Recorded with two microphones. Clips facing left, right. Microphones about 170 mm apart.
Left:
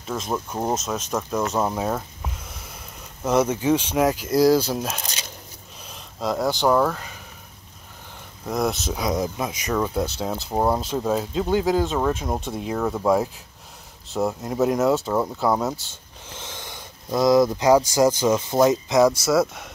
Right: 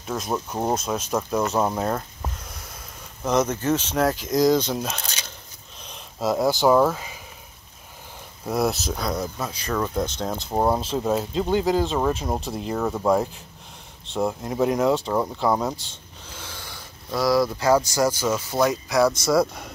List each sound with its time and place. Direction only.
0.0 s speech: 5° right (ahead or behind)
5.8 s a sound: 5° left (ahead or behind)
6.1 s speech: 10° right (ahead or behind)
8.5 s speech: 5° right (ahead or behind)
8.9 s speech: 15° left (ahead or behind)
16.3 s speech: 20° left (ahead or behind)
19.1 s speech: 5° left (ahead or behind)